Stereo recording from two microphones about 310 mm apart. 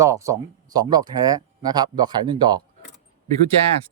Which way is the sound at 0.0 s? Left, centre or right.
Centre.